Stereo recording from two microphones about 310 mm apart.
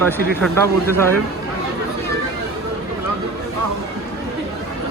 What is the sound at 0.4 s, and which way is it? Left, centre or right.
Speech, centre.